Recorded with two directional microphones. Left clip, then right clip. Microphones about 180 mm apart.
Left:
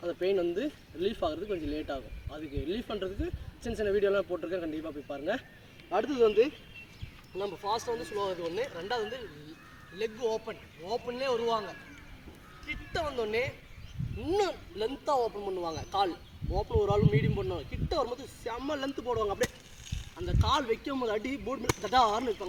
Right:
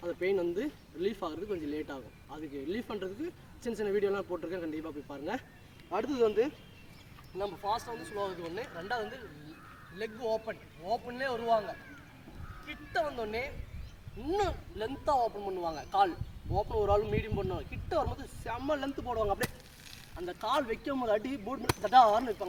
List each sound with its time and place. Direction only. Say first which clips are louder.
0.0 s speech: left 2 dB; 10° right (ahead or behind)